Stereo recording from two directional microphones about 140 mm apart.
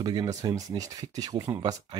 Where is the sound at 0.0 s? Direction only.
30° right (ahead or behind).